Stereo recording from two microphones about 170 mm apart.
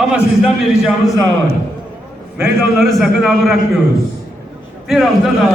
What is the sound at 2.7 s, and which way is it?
Speech, centre (ahead or behind).